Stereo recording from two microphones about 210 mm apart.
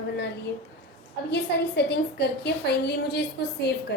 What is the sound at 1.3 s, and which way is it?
A woman's voice, 50° left (ahead or behind).